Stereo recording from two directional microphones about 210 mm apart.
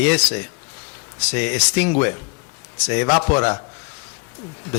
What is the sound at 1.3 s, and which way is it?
A man's voice, 10° left (ahead or behind).